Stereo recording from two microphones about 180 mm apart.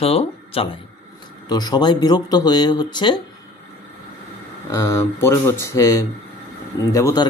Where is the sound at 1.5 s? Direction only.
20° left (ahead or behind).